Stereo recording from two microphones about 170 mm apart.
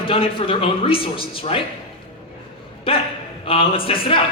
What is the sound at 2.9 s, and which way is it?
A man's voice, 35° left (ahead or behind).